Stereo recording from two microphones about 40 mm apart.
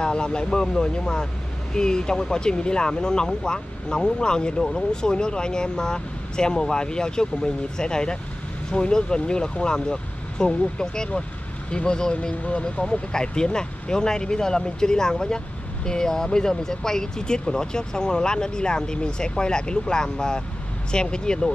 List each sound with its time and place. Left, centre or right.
0.0 s speech: left